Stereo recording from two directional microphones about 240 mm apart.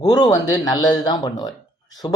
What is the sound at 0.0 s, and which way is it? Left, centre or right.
Speech, centre.